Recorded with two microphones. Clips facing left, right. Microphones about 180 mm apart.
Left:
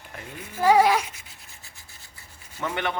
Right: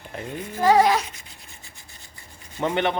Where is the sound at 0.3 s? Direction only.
10° left (ahead or behind).